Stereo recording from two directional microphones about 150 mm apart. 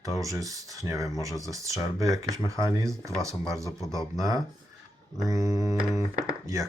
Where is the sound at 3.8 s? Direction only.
25° left (ahead or behind).